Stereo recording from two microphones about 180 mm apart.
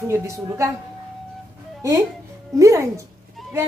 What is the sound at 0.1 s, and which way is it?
Speech, 15° right (ahead or behind).